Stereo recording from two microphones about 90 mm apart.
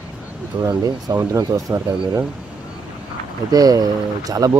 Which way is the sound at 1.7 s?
30° right (ahead or behind).